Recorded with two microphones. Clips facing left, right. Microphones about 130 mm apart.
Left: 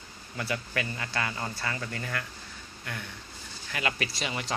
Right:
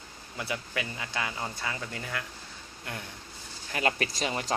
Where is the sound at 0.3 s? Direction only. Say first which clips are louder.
Left 2 dB; 15° right (ahead or behind).